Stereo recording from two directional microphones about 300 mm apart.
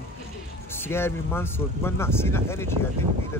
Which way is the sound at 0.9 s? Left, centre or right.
Centre.